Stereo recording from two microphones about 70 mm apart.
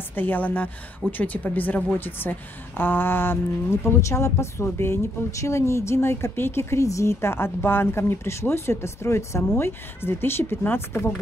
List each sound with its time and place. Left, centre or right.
0.1 s a woman's voice: left